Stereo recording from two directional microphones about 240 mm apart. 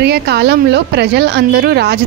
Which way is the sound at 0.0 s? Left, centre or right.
Right.